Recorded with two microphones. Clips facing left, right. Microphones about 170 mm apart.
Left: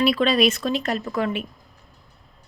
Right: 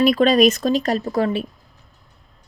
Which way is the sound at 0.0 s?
45° right (ahead or behind).